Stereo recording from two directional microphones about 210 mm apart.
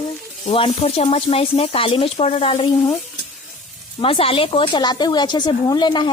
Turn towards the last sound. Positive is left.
turn(degrees=20)  # may be behind; listen again after turning